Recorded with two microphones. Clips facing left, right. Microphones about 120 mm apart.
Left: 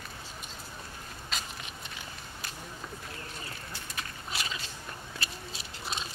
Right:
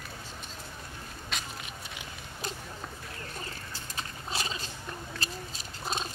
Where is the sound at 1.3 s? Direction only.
Centre (ahead or behind).